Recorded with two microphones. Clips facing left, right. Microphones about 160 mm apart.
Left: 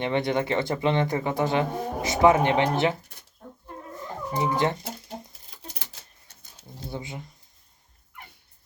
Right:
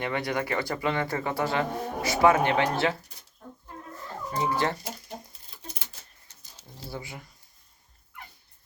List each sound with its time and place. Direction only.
0.0 s speech: 25° left (ahead or behind)
4.0 s cat: 20° left (ahead or behind)
5.9 s typewriter: 60° left (ahead or behind)
6.8 s speech: 20° left (ahead or behind)